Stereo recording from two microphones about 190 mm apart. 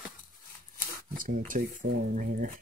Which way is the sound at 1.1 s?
45° right (ahead or behind).